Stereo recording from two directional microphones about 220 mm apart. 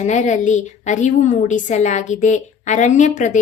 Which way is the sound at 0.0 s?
35° left (ahead or behind).